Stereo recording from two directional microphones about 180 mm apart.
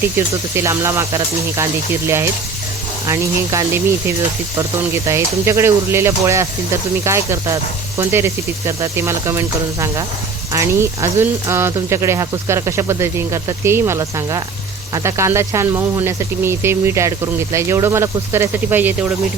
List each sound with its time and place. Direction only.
0.5 s speech: 15° right (ahead or behind)
5.0 s speech: 15° right (ahead or behind)
10.5 s speech: 15° right (ahead or behind)